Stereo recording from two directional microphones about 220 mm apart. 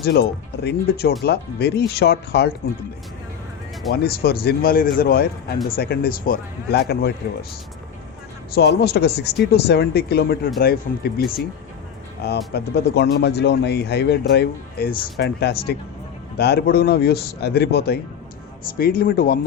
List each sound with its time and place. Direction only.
0.0 s speech: 45° left (ahead or behind)
3.9 s speech: 45° left (ahead or behind)
8.5 s speech: 45° left (ahead or behind)